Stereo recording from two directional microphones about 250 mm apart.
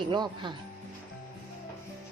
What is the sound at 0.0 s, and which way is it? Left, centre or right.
Speech, centre.